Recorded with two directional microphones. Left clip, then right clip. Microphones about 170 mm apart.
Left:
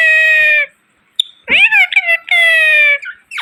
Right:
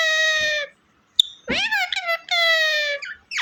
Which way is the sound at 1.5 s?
25° right (ahead or behind).